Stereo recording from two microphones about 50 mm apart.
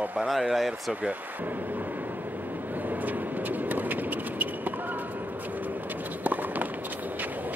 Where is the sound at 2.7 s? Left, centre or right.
Right.